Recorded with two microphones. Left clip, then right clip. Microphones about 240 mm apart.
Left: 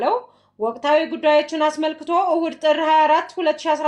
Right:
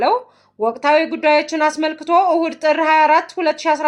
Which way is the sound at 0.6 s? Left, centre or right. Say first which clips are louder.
Right 3 dB; right.